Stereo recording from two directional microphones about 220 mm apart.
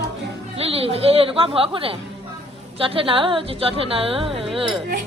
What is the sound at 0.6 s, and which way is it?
Speech, 25° right (ahead or behind).